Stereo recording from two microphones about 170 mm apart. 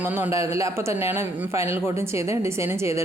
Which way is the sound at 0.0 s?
15° right (ahead or behind).